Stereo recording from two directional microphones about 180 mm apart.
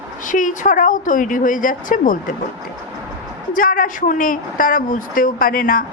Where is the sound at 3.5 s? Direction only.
50° left (ahead or behind).